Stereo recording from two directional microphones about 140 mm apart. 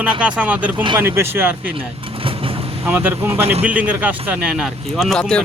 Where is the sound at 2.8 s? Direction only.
15° right (ahead or behind).